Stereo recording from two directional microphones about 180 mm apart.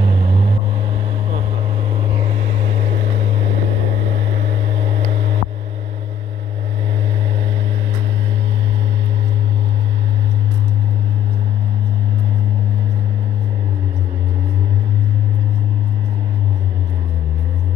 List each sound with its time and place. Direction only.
0.0 s vehicle: 30° right (ahead or behind)